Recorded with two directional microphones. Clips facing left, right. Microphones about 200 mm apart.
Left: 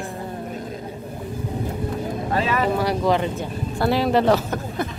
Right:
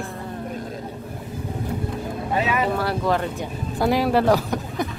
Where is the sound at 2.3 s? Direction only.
10° right (ahead or behind).